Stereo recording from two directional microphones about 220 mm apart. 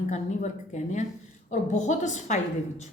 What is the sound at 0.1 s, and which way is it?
Speech, 35° left (ahead or behind).